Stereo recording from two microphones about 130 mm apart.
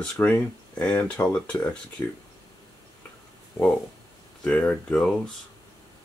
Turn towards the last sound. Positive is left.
turn(degrees=5)  # may be behind; listen again after turning